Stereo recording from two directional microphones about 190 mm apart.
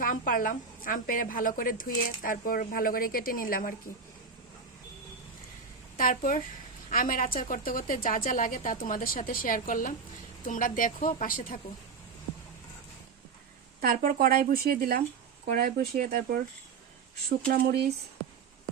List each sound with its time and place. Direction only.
0.0 s a woman's voice: 45° left (ahead or behind)
6.0 s a woman's voice: 45° left (ahead or behind)
13.8 s speech: 45° right (ahead or behind)